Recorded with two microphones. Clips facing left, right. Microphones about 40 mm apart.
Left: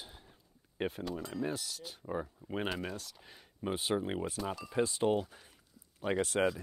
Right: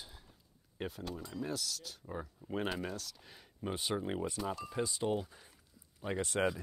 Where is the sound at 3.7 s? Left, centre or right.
Left.